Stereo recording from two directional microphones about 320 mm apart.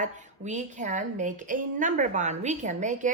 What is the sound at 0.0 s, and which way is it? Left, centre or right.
A woman's voice, right.